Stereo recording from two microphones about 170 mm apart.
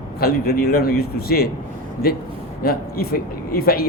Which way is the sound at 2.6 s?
65° left (ahead or behind).